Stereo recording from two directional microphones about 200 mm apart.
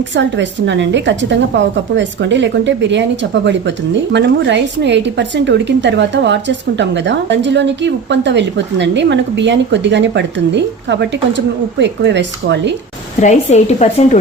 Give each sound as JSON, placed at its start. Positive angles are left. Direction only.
{"t": 0.2, "sound": "a woman's voice", "side_deg": -65}
{"t": 4.1, "sound": "a woman's voice", "side_deg": -60}
{"t": 13.2, "sound": "a woman's voice", "side_deg": 35}